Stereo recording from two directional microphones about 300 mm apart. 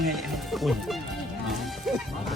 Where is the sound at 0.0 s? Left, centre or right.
Centre.